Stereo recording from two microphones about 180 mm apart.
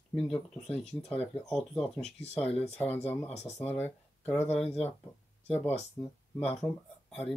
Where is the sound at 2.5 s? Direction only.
35° left (ahead or behind).